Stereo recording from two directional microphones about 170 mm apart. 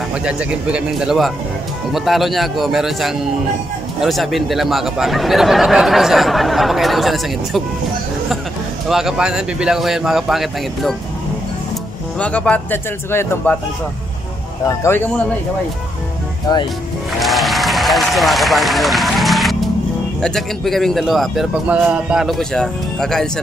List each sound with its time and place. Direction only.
0.2 s speech: 5° right (ahead or behind)
8.8 s speech: centre (ahead or behind)
12.2 s a man's voice: 5° left (ahead or behind)
14.7 s a man's voice: 15° left (ahead or behind)
17.2 s applause: centre (ahead or behind)
20.2 s speech: 5° left (ahead or behind)